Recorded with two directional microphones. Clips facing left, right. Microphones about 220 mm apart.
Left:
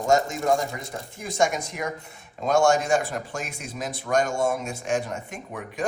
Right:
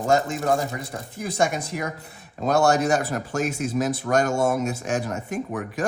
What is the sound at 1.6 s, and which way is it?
Speech, 35° right (ahead or behind).